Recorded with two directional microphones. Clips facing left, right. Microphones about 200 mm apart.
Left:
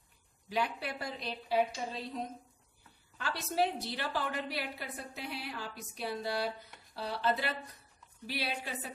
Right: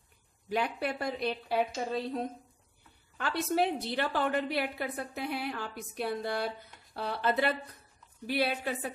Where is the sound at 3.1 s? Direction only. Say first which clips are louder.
Right 4 dB; 55° right (ahead or behind).